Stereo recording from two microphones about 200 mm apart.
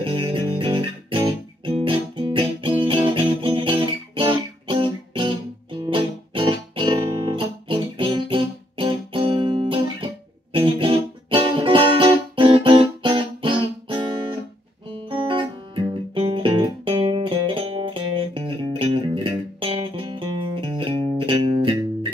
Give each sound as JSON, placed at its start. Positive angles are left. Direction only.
{"t": 0.0, "sound": "music", "side_deg": -25}